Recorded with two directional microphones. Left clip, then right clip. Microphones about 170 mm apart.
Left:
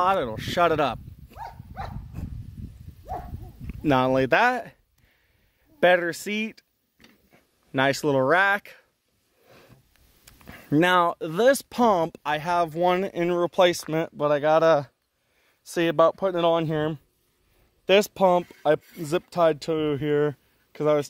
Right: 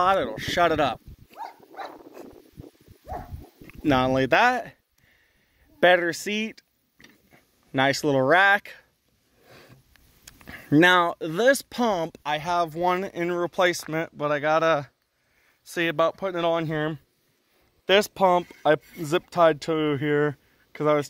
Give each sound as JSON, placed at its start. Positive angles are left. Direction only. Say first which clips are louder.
{"t": 0.0, "sound": "speech", "louder": "right 1 dB", "side_deg": 15}
{"t": 0.4, "sound": "speech", "louder": "even", "side_deg": 25}
{"t": 1.4, "sound": "dog", "louder": "right 1 dB", "side_deg": 0}
{"t": 3.6, "sound": "speech", "louder": "even", "side_deg": 25}
{"t": 5.8, "sound": "speech", "louder": "right 1 dB", "side_deg": 15}
{"t": 7.2, "sound": "a sound", "louder": "right 2 dB", "side_deg": 25}
{"t": 8.2, "sound": "speech", "louder": "right 3 dB", "side_deg": 10}
{"t": 9.4, "sound": "a sound", "louder": "right 2 dB", "side_deg": 5}
{"t": 11.0, "sound": "speech", "louder": "left 1 dB", "side_deg": 25}
{"t": 15.6, "sound": "speech", "louder": "left 3 dB", "side_deg": 85}
{"t": 18.5, "sound": "speech", "louder": "right 1 dB", "side_deg": 20}